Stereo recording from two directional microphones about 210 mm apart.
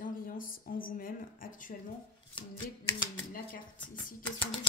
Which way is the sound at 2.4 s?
20° left (ahead or behind).